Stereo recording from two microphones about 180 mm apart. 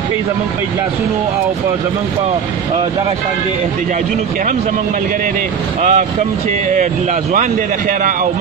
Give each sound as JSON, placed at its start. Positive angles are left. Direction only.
{"t": 5.8, "sound": "speech", "side_deg": -40}